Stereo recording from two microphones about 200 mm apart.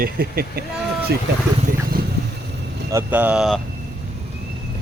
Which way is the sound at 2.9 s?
10° right (ahead or behind).